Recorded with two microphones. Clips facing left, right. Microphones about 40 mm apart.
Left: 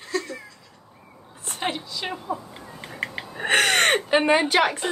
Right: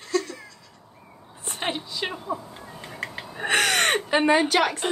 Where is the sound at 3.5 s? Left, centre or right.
Left.